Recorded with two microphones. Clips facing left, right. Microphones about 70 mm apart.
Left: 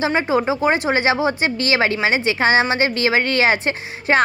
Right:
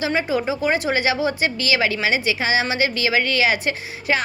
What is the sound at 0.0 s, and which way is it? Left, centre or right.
A woman's voice, left.